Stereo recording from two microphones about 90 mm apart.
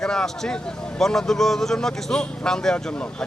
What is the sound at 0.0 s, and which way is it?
Speech, 5° left (ahead or behind).